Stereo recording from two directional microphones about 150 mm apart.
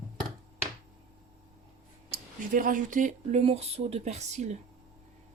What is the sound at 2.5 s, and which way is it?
Speech, 65° right (ahead or behind).